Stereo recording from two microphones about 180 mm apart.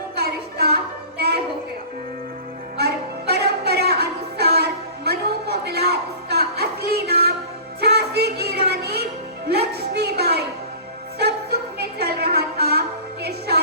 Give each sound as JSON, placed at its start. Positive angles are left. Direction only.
{"t": 0.2, "sound": "music", "side_deg": -60}
{"t": 2.7, "sound": "music", "side_deg": -65}
{"t": 9.5, "sound": "a sound", "side_deg": -65}
{"t": 11.2, "sound": "music", "side_deg": -60}